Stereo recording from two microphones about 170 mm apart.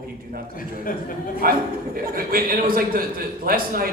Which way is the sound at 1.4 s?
60° right (ahead or behind).